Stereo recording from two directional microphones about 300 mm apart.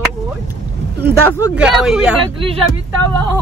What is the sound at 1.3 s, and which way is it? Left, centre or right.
Speech, centre.